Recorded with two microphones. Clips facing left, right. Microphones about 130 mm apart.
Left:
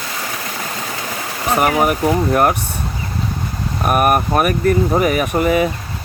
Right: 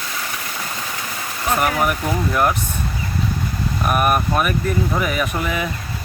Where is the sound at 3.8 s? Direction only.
50° left (ahead or behind).